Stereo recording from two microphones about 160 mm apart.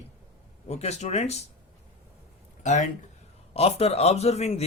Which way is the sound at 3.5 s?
40° left (ahead or behind).